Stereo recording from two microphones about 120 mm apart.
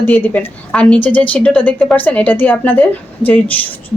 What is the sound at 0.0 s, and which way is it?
A woman's voice, 15° left (ahead or behind).